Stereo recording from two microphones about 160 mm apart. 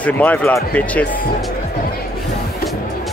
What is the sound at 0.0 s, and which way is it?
Speech, 10° left (ahead or behind).